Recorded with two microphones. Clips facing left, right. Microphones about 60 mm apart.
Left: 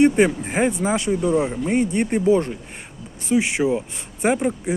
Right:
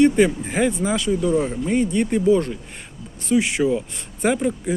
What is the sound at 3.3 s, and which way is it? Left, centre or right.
Speech, centre.